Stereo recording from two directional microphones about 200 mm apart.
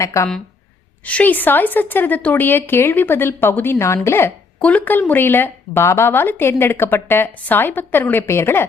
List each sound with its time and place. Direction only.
0.0 s a woman's voice: 15° left (ahead or behind)